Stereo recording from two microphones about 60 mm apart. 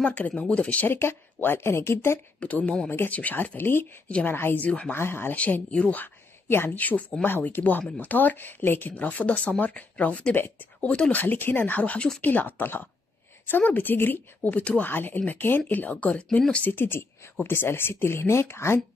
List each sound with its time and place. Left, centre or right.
0.0 s speech: left
0.8 s speech: left
2.4 s a woman's voice: left
4.6 s speech: centre
4.9 s a woman's voice: left
5.3 s a woman's voice: left
10.3 s a woman's voice: left
10.8 s speech: left
11.1 s a woman's voice: left
14.9 s a woman's voice: left
16.6 s speech: left